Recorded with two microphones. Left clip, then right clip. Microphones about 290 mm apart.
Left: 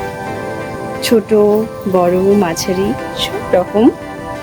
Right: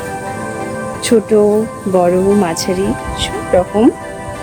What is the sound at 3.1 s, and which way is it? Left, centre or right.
Music, centre.